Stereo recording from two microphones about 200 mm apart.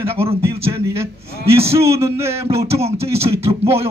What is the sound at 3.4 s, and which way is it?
Speech, 30° right (ahead or behind).